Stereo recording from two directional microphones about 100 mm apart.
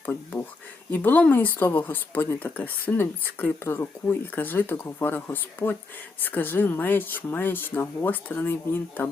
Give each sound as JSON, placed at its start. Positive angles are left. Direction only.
{"t": 0.0, "sound": "speech", "side_deg": 20}